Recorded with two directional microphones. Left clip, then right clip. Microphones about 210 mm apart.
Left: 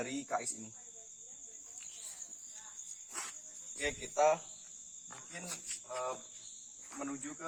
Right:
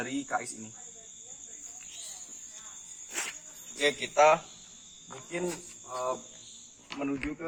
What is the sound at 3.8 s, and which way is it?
Speech, 10° left (ahead or behind).